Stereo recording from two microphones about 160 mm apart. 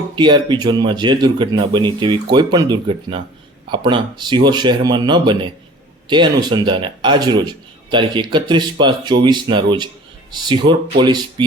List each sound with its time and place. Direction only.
0.2 s a man's voice: 30° right (ahead or behind)